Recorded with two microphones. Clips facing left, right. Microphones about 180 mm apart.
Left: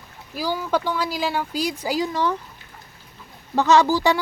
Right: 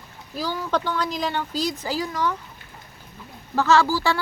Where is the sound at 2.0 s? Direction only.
30° left (ahead or behind).